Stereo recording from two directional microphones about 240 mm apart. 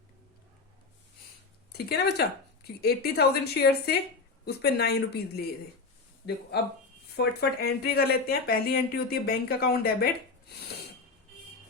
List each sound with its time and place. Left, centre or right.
1.7 s speech: left
7.2 s speech: left